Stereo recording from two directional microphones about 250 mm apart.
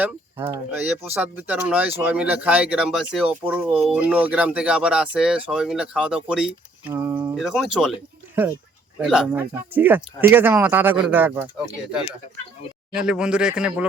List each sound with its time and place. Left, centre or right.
0.0 s speech: centre
9.0 s a man's voice: centre
12.9 s speech: centre